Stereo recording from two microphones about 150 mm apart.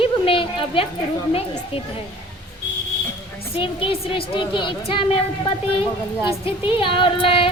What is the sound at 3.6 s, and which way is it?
A woman's voice, 35° left (ahead or behind).